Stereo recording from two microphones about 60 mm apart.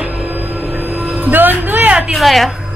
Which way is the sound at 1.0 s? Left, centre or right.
Right.